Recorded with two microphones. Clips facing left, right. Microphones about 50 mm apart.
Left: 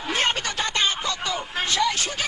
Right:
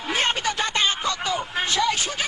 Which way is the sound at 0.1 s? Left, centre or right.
Centre.